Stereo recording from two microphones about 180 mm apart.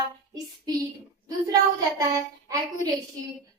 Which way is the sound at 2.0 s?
20° right (ahead or behind).